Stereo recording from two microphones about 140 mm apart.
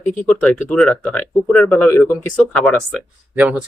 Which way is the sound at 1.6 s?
20° left (ahead or behind).